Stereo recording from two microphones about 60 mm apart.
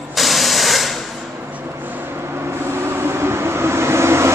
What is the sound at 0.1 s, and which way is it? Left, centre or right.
Spray, centre.